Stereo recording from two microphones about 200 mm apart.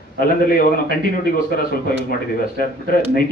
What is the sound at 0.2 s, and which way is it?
A man's voice, 45° left (ahead or behind).